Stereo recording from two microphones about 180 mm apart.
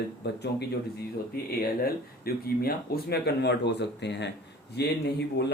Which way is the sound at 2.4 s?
60° left (ahead or behind).